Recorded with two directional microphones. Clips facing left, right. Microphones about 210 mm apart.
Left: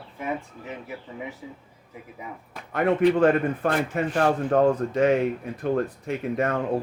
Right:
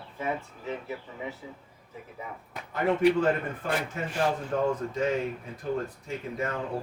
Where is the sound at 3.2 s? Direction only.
65° left (ahead or behind).